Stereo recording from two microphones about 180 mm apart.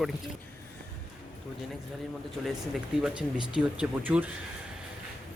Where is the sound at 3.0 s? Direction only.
5° right (ahead or behind).